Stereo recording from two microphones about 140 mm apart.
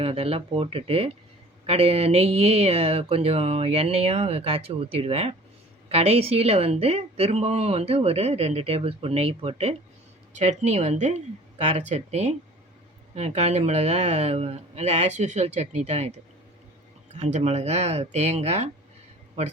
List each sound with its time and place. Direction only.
0.0 s speech: 40° right (ahead or behind)
10.3 s speech: 55° right (ahead or behind)
17.2 s speech: 55° right (ahead or behind)